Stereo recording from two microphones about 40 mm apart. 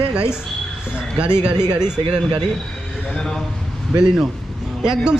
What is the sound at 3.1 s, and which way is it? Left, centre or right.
Speech, centre.